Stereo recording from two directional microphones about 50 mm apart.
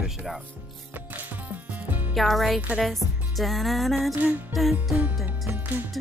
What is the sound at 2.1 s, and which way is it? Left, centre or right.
Speech, centre.